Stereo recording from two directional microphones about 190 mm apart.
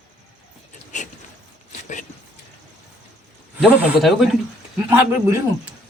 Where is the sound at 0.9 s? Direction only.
40° left (ahead or behind).